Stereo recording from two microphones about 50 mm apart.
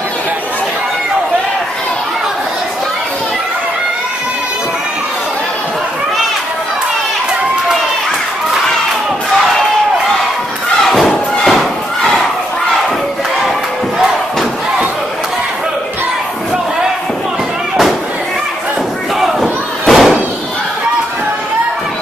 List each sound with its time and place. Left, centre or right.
10.9 s thump: centre
19.1 s battle cry: centre